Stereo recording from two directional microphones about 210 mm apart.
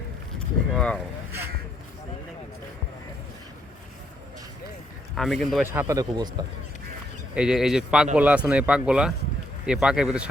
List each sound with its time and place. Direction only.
0.3 s speech: 5° left (ahead or behind)
5.1 s speech: centre (ahead or behind)
5.8 s speech: 20° right (ahead or behind)
7.3 s speech: 5° right (ahead or behind)